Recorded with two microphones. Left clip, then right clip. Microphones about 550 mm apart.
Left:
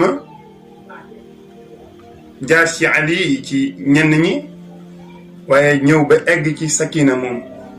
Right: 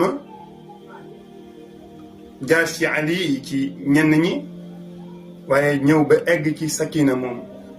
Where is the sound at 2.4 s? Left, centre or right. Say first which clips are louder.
Left 5 dB; right.